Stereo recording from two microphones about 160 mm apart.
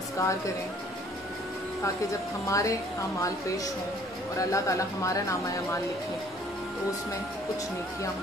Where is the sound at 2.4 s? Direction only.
20° left (ahead or behind).